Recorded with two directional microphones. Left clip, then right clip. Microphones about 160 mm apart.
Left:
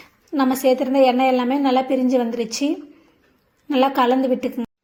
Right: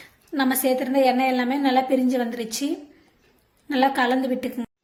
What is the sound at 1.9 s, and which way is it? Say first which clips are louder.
Speech: left 3 dB; 40° right (ahead or behind).